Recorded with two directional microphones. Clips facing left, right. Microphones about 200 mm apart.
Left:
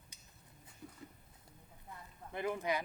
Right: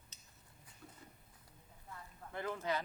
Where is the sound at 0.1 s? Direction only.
10° left (ahead or behind).